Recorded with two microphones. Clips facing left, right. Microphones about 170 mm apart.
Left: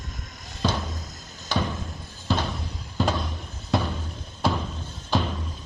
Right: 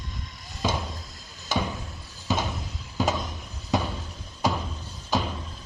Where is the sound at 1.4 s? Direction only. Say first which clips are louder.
Left 1 dB; 10° right (ahead or behind).